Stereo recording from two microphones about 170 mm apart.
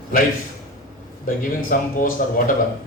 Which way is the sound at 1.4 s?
50° left (ahead or behind).